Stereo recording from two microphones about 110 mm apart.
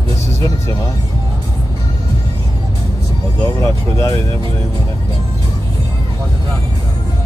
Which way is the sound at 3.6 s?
25° left (ahead or behind).